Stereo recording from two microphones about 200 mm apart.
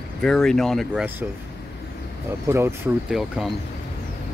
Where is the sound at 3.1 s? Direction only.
Centre (ahead or behind).